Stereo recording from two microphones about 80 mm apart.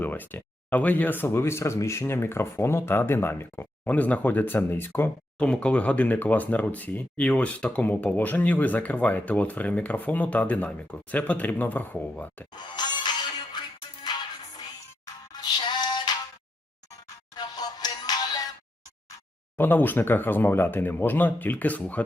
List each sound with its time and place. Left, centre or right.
0.0 s speech: left
3.8 s speech: centre
5.4 s speech: centre
12.5 s music: left
17.3 s music: left
19.5 s speech: left